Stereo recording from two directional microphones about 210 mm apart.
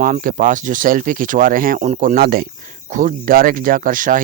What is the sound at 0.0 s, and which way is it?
Speech, 40° right (ahead or behind).